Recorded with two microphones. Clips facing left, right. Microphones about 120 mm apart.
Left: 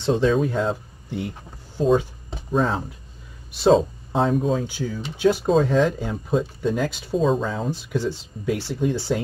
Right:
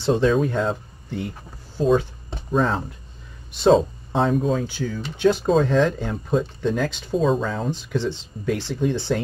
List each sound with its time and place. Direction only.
0.0 s speech: centre (ahead or behind)
2.3 s speech: 5° left (ahead or behind)
4.6 s speech: 20° left (ahead or behind)